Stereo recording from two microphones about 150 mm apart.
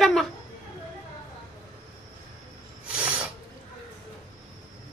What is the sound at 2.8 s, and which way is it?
Filing, 10° right (ahead or behind).